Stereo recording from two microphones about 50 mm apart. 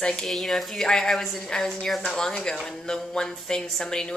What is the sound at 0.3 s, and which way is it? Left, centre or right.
A woman's voice, centre.